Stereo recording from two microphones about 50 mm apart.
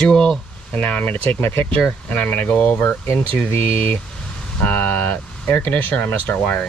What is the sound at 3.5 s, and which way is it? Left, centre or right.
Speech, left.